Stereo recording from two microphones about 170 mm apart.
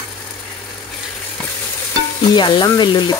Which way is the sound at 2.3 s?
25° left (ahead or behind).